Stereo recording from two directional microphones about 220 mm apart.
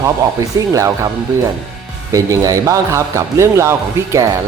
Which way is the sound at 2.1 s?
15° right (ahead or behind).